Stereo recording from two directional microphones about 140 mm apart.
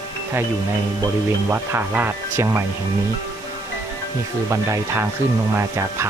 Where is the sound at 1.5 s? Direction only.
15° right (ahead or behind).